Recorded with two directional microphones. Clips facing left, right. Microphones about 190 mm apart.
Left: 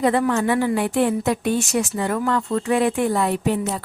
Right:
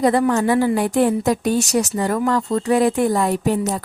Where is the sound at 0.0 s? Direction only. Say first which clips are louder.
Right 2 dB; 35° right (ahead or behind).